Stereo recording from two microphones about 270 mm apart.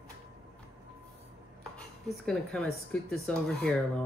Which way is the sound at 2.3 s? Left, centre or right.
Centre.